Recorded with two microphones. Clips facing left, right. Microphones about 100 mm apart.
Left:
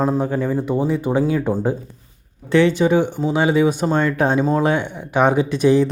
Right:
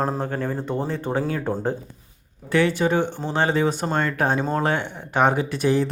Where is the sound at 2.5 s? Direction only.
25° left (ahead or behind).